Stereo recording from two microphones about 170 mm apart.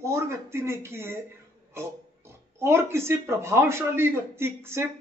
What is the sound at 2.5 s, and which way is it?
Speech, 15° right (ahead or behind).